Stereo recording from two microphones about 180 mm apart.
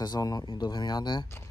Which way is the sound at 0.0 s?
20° left (ahead or behind).